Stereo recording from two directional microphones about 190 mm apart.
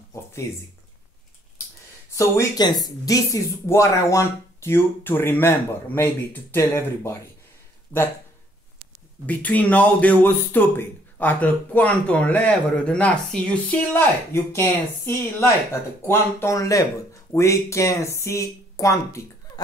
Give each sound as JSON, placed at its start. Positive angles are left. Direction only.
{"t": 0.1, "sound": "a sound", "side_deg": 15}
{"t": 2.1, "sound": "speech", "side_deg": 20}
{"t": 9.2, "sound": "speech", "side_deg": 10}